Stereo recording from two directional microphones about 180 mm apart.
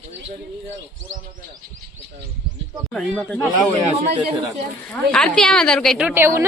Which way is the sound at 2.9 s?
5° left (ahead or behind).